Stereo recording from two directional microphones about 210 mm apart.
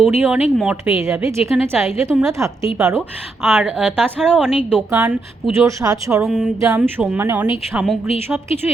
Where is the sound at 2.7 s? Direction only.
5° right (ahead or behind).